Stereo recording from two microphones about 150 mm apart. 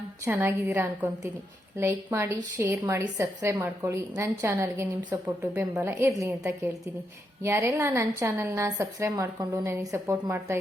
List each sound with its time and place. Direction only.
0.3 s a woman's voice: 15° right (ahead or behind)
7.4 s a woman's voice: 15° right (ahead or behind)